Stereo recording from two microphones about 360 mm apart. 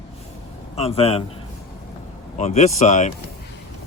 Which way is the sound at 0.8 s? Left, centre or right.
Centre.